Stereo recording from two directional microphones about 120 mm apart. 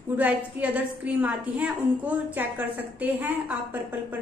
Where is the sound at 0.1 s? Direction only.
10° right (ahead or behind).